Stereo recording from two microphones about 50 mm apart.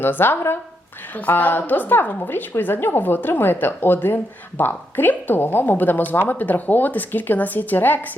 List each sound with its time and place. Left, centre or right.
0.0 s a woman's voice: left